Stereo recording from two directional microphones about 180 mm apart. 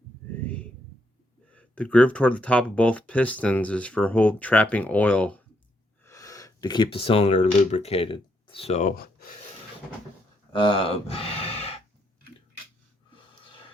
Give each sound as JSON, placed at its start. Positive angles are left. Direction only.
{"t": 0.4, "sound": "a sound", "side_deg": 5}
{"t": 1.5, "sound": "speech", "side_deg": 5}
{"t": 10.5, "sound": "speech", "side_deg": 30}
{"t": 13.1, "sound": "snort", "side_deg": 30}